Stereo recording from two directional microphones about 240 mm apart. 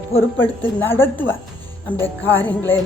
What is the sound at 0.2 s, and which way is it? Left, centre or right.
A woman's voice, centre.